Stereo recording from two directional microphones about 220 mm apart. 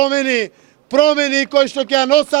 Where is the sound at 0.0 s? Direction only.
40° left (ahead or behind).